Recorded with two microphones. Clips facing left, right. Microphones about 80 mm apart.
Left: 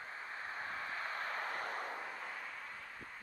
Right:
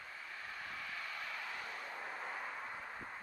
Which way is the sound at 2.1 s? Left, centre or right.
Centre.